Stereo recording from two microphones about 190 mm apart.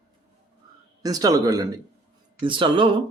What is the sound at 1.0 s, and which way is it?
Speech, 20° right (ahead or behind).